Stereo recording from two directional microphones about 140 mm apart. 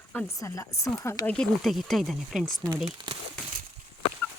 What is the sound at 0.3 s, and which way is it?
Speech, 20° left (ahead or behind).